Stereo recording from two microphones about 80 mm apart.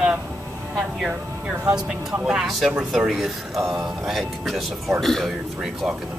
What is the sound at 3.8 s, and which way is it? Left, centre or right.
Speech, centre.